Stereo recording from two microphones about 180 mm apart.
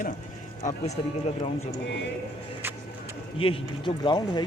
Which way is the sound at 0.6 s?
45° left (ahead or behind).